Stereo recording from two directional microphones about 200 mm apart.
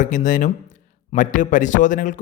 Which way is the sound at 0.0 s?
40° left (ahead or behind).